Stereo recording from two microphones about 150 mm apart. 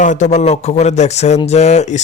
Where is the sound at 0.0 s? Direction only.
55° left (ahead or behind).